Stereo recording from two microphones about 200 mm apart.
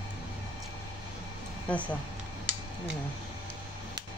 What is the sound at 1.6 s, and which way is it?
Speech, 5° left (ahead or behind).